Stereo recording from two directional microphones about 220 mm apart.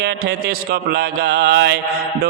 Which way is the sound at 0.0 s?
50° right (ahead or behind).